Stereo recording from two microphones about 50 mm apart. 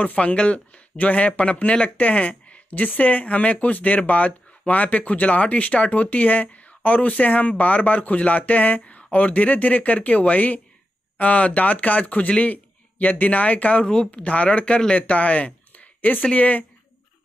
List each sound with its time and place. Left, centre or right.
0.0 s a man's voice: left